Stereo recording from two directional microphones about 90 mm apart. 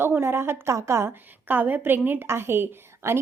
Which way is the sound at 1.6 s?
20° right (ahead or behind).